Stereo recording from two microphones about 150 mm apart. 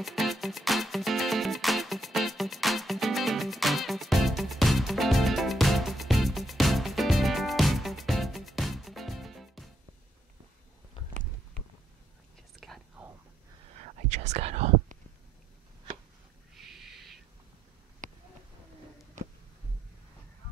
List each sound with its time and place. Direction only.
0.0 s music: centre (ahead or behind)
12.5 s whispering: centre (ahead or behind)
14.0 s whispering: 50° right (ahead or behind)
16.5 s a sound: centre (ahead or behind)